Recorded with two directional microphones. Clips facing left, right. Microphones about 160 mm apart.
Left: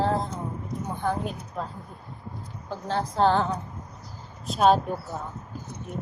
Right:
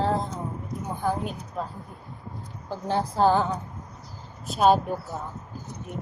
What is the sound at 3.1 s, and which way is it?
Speech, 5° right (ahead or behind).